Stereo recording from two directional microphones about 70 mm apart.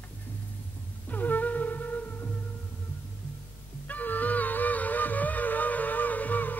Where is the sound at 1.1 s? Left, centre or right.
Left.